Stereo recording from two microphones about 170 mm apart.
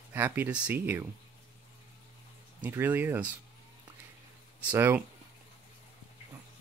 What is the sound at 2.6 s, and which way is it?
Speech, 10° right (ahead or behind).